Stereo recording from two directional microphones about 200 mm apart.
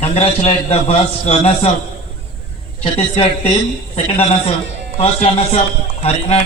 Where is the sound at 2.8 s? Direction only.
30° left (ahead or behind).